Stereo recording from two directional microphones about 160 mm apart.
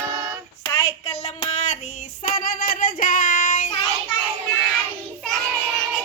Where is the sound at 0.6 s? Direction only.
20° left (ahead or behind).